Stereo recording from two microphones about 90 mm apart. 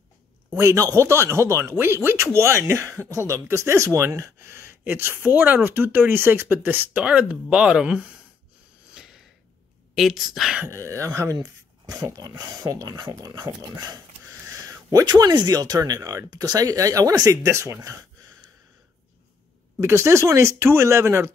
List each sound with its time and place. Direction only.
0.6 s speech: 35° right (ahead or behind); by 8.1 s 10° right (ahead or behind)
9.9 s speech: 5° right (ahead or behind)
10.7 s speech: 35° right (ahead or behind)
19.8 s speech: 30° right (ahead or behind)